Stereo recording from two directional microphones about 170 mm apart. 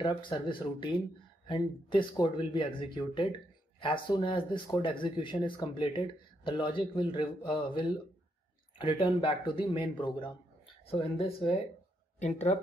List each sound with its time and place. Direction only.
0.0 s speech: 30° left (ahead or behind)